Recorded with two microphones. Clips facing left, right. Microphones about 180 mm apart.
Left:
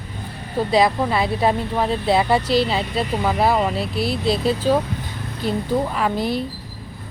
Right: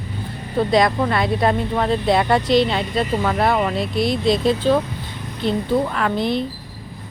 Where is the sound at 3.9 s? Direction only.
35° left (ahead or behind).